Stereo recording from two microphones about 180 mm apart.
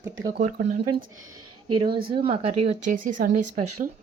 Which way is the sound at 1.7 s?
25° right (ahead or behind).